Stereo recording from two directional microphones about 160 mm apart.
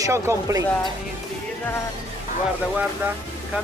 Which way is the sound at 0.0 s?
20° right (ahead or behind).